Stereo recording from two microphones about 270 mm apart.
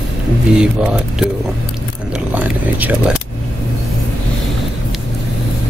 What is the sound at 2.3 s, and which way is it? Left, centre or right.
Speech, centre.